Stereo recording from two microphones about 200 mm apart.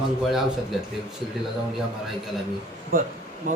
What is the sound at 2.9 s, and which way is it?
Speech, 45° right (ahead or behind).